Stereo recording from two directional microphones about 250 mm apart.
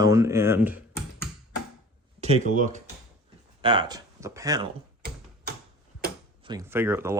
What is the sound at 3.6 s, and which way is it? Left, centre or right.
Speech, centre.